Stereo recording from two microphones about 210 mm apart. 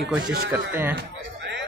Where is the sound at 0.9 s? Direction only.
55° right (ahead or behind).